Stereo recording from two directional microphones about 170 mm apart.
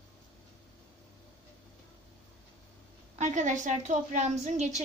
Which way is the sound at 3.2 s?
45° right (ahead or behind).